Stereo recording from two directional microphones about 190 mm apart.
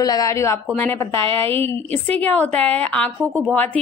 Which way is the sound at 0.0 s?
20° left (ahead or behind).